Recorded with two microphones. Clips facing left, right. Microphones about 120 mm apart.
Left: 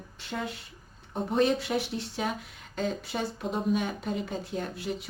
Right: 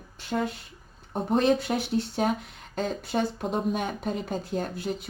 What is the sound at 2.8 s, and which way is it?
Speech, 45° right (ahead or behind).